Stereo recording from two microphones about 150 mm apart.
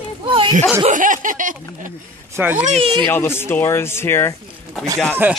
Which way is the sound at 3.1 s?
15° left (ahead or behind).